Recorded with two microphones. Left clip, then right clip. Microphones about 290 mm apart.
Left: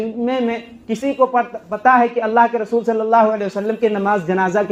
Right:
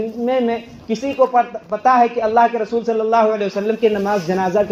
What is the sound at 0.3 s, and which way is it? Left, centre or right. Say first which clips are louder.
A man's voice: right 4 dB; left.